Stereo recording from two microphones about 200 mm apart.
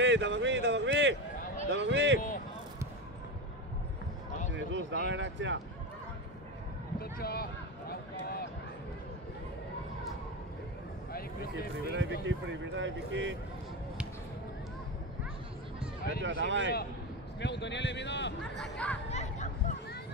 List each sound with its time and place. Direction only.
0.0 s a sound: 65° right (ahead or behind)
1.7 s speech: 60° right (ahead or behind)
4.5 s speech: 65° right (ahead or behind)
7.0 s speech: 50° left (ahead or behind)
7.9 s run: 50° left (ahead or behind)
11.1 s a sound: 50° left (ahead or behind)
11.9 s speech: 70° right (ahead or behind)
16.2 s speech: 65° right (ahead or behind)
17.4 s a man's voice: 60° left (ahead or behind)
18.6 s speech: 5° left (ahead or behind)
19.0 s chatter: 35° left (ahead or behind)